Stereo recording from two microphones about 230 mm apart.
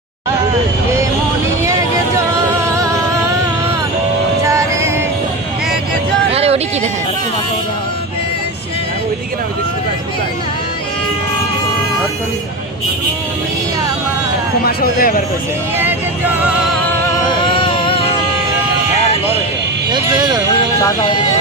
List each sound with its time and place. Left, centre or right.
2.6 s music: centre
4.4 s music: centre
6.3 s a sound: right
14.6 s speech: left
15.8 s vehicle: centre
17.1 s music: left
19.9 s speech: centre